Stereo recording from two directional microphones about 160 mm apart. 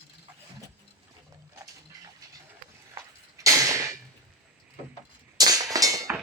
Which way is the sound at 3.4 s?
20° right (ahead or behind).